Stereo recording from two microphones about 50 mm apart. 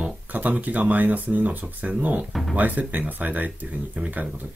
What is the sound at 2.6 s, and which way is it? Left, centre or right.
Speech, right.